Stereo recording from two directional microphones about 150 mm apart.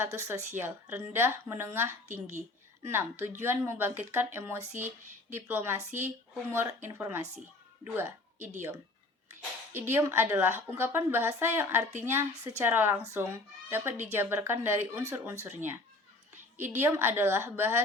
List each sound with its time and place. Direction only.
0.0 s a woman's voice: 15° right (ahead or behind)
9.7 s a woman's voice: 15° right (ahead or behind)